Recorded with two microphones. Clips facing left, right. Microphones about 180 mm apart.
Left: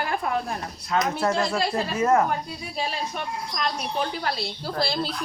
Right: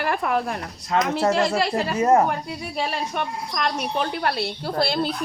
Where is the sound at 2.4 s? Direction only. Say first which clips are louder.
Right 3 dB; 65° right (ahead or behind).